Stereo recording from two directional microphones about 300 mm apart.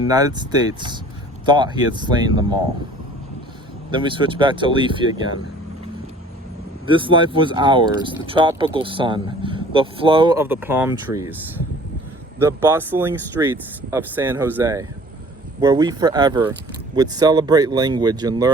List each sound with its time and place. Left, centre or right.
0.1 s speech: centre
3.9 s speech: centre
6.8 s speech: centre
12.4 s speech: centre